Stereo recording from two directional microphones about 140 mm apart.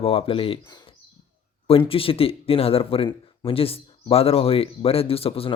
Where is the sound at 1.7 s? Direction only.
40° left (ahead or behind).